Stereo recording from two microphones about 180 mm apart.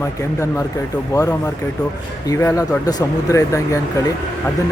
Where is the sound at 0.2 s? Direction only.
15° left (ahead or behind).